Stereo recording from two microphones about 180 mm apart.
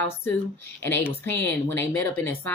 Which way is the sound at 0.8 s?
10° left (ahead or behind).